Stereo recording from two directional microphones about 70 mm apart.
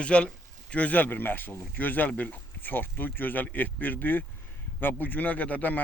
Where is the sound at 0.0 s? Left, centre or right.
Centre.